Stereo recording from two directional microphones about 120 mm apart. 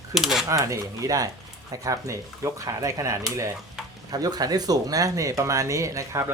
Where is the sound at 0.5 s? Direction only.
30° right (ahead or behind).